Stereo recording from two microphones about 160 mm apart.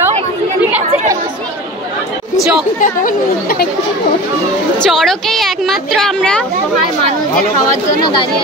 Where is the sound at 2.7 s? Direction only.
60° left (ahead or behind).